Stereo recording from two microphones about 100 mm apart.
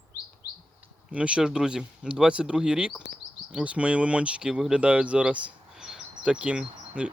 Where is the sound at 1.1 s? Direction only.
10° right (ahead or behind).